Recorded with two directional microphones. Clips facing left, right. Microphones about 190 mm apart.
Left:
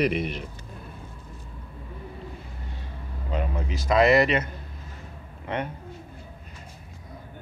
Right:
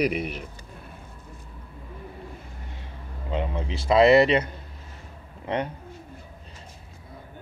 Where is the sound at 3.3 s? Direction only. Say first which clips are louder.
Right 1 dB; 25° right (ahead or behind).